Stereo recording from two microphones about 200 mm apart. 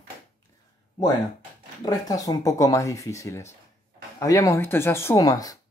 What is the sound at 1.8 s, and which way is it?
Speech, 20° left (ahead or behind).